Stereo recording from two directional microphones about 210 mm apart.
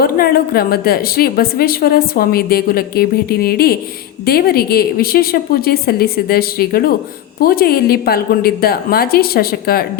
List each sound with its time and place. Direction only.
0.0 s a woman's voice: 45° left (ahead or behind)